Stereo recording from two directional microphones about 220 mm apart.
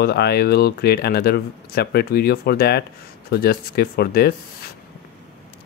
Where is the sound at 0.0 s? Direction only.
45° left (ahead or behind).